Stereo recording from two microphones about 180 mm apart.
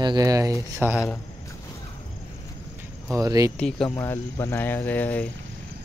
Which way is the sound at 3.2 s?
20° right (ahead or behind).